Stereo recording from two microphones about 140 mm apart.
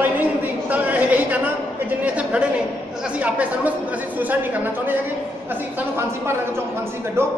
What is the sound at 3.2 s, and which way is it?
Speech, 10° right (ahead or behind).